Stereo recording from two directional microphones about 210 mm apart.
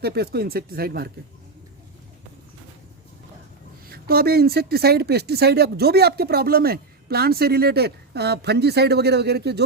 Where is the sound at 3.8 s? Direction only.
45° right (ahead or behind).